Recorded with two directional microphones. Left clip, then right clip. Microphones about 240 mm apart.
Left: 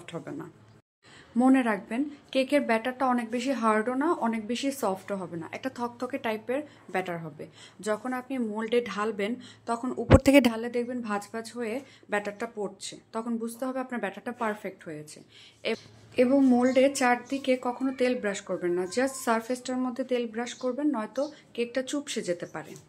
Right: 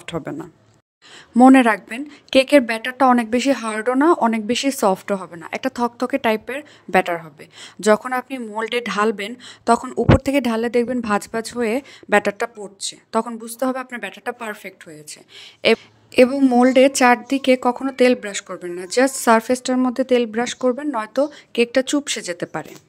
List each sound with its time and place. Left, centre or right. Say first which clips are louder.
0.0 s a woman's voice: right 10 dB; right
10.0 s a woman's voice: even; centre
10.5 s a woman's voice: right 12 dB; right